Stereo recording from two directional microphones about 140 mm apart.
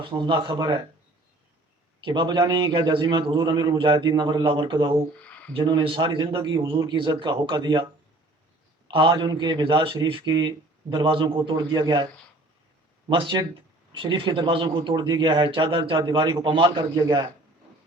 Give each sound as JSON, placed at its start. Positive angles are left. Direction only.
{"t": 0.0, "sound": "speech", "side_deg": -35}
{"t": 2.0, "sound": "speech", "side_deg": -35}
{"t": 5.2, "sound": "a sound", "side_deg": 10}
{"t": 5.5, "sound": "speech", "side_deg": -40}
{"t": 8.9, "sound": "speech", "side_deg": -35}
{"t": 13.1, "sound": "speech", "side_deg": -35}